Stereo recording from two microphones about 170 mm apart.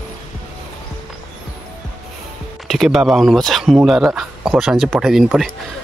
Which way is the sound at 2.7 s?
Centre (ahead or behind).